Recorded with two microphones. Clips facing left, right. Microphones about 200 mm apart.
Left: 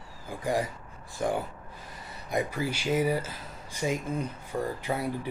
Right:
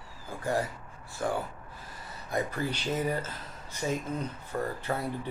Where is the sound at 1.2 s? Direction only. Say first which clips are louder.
Left 2 dB; 15° left (ahead or behind).